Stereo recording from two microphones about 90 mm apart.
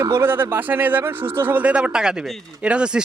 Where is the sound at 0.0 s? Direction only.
25° right (ahead or behind).